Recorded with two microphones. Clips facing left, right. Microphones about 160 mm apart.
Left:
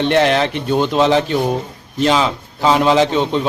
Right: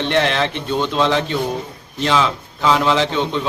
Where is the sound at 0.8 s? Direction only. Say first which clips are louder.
Left 3 dB; 10° left (ahead or behind).